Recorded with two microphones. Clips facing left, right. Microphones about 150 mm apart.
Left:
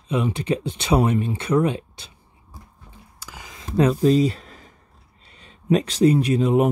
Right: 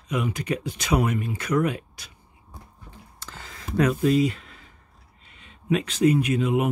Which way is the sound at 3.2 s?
10° left (ahead or behind).